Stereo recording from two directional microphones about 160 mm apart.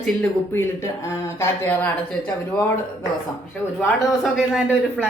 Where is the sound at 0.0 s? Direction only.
10° left (ahead or behind).